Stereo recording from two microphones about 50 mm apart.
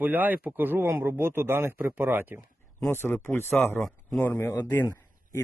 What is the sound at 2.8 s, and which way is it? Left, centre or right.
Speech, left.